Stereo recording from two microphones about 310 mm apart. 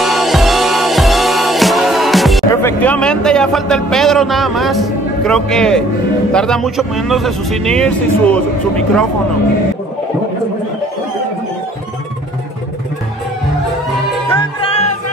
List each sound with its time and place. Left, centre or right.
0.0 s music: centre
2.5 s speech: centre
14.3 s music: centre